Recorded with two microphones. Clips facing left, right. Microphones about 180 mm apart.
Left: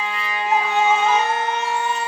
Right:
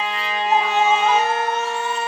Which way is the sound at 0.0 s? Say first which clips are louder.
Right 2 dB; 30° right (ahead or behind).